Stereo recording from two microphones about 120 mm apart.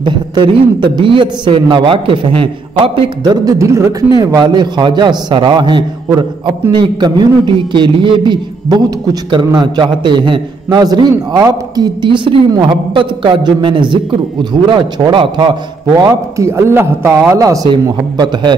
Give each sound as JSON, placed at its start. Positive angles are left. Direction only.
{"t": 0.0, "sound": "a man's voice", "side_deg": -40}
{"t": 3.3, "sound": "speech", "side_deg": -25}
{"t": 4.2, "sound": "a man's voice", "side_deg": -35}
{"t": 16.0, "sound": "a man's voice", "side_deg": -25}